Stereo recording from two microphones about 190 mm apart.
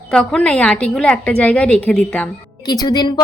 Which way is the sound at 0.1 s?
5° left (ahead or behind).